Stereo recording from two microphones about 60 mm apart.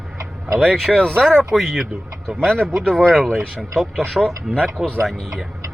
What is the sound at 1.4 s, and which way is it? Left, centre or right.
Speech, centre.